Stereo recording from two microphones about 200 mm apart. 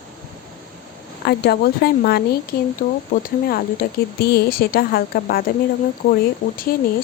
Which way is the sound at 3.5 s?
50° left (ahead or behind).